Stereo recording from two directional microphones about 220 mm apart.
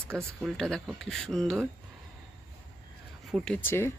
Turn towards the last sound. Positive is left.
turn(degrees=10)  # may be behind; listen again after turning